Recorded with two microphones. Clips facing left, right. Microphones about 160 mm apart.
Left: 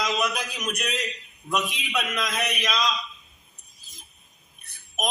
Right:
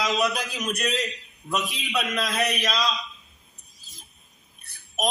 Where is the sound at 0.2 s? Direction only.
35° right (ahead or behind).